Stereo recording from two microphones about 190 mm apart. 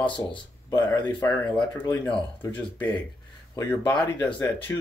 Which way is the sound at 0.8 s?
10° left (ahead or behind).